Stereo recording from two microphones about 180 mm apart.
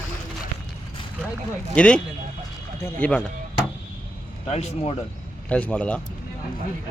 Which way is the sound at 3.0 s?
10° left (ahead or behind).